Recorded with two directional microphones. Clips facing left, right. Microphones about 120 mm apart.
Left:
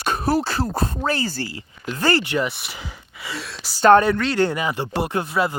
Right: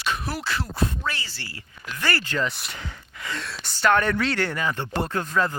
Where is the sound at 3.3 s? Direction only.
5° left (ahead or behind).